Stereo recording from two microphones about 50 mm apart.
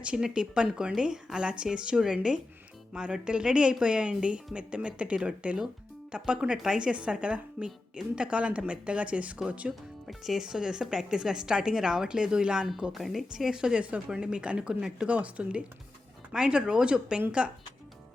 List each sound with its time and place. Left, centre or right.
0.0 s a woman's voice: right
10.1 s a woman's voice: centre
12.9 s a woman's voice: centre
15.1 s a woman's voice: right